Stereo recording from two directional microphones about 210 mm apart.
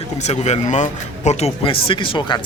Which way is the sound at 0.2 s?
35° left (ahead or behind).